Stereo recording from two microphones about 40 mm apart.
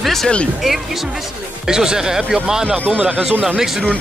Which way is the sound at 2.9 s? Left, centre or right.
Right.